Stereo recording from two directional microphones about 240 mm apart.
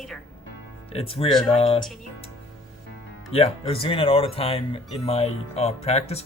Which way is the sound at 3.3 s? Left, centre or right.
Left.